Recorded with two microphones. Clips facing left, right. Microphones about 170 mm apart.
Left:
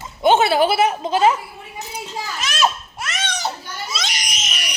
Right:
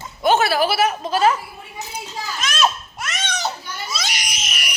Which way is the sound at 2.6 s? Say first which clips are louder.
Left 1 dB; 10° left (ahead or behind).